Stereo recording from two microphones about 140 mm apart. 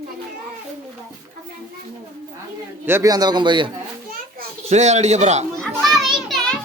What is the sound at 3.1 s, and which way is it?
Speech, 30° right (ahead or behind).